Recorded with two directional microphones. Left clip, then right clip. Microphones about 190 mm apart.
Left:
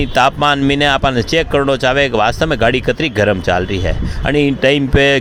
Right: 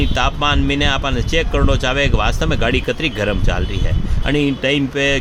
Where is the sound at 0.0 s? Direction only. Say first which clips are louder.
Left 6 dB; 35° left (ahead or behind).